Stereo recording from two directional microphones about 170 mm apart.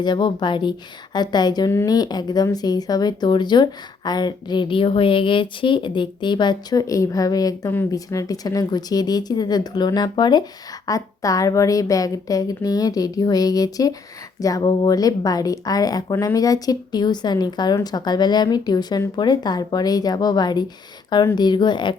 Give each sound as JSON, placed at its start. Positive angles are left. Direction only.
{"t": 0.0, "sound": "a woman's voice", "side_deg": 25}